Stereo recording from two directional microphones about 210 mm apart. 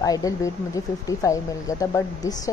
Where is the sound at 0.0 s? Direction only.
15° left (ahead or behind).